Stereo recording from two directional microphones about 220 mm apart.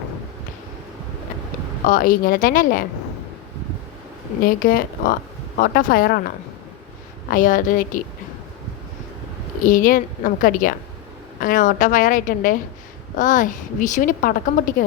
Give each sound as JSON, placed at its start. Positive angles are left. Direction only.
{"t": 1.9, "sound": "a woman's voice", "side_deg": 40}
{"t": 4.4, "sound": "a woman's voice", "side_deg": 40}
{"t": 9.6, "sound": "a woman's voice", "side_deg": 35}